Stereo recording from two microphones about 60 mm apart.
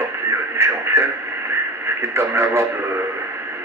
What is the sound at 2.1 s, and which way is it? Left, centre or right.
Speech, right.